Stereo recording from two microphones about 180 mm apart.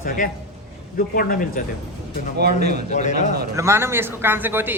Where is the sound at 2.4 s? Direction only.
65° right (ahead or behind).